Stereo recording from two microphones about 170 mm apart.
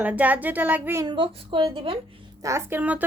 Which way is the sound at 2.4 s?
15° right (ahead or behind).